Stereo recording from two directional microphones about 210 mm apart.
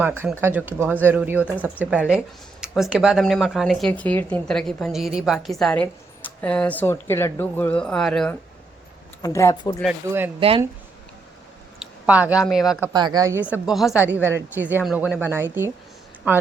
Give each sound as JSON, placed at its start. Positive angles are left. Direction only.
{"t": 0.2, "sound": "speech", "side_deg": -10}
{"t": 9.2, "sound": "speech", "side_deg": 15}
{"t": 10.1, "sound": "speech", "side_deg": -10}
{"t": 11.8, "sound": "speech", "side_deg": -5}
{"t": 12.9, "sound": "speech", "side_deg": -20}